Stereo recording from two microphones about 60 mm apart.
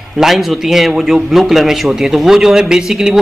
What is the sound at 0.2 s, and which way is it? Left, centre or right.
A man's voice, centre.